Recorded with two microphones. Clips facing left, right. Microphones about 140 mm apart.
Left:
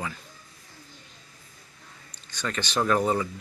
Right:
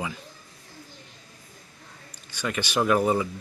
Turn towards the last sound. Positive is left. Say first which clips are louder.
# right 2 dB
turn(degrees=-10)  # may be behind; listen again after turning